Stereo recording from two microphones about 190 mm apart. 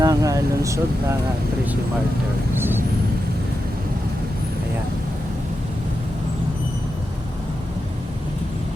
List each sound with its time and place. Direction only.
0.0 s vehicle: 20° right (ahead or behind)
2.6 s vehicle: 10° right (ahead or behind)